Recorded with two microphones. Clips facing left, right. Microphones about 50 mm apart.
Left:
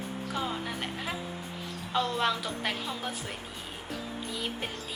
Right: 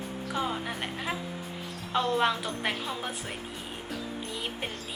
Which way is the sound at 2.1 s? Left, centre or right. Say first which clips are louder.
Right 3 dB; centre.